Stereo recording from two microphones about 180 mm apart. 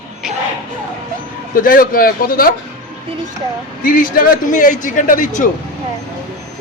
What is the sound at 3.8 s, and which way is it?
A man's voice, 50° left (ahead or behind).